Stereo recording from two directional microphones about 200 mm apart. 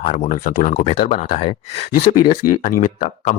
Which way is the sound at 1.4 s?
25° left (ahead or behind).